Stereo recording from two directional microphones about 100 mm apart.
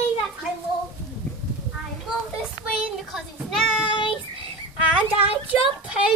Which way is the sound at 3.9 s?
55° left (ahead or behind).